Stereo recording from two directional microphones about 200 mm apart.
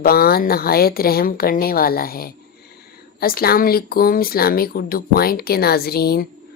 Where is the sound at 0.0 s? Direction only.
50° left (ahead or behind).